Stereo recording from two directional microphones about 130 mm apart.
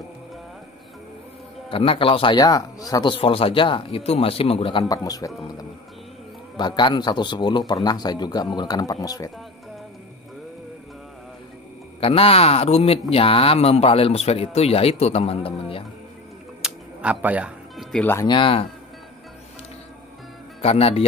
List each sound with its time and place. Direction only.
1.7 s speech: 45° left (ahead or behind)
2.3 s speech: 30° left (ahead or behind); by 4.8 s 45° left (ahead or behind)
4.8 s speech: 30° left (ahead or behind)
6.5 s a man's voice: 35° left (ahead or behind)
12.0 s speech: 45° left (ahead or behind)
16.6 s music: 10° right (ahead or behind)
18.2 s a man's voice: 40° left (ahead or behind)
20.6 s speech: 50° left (ahead or behind)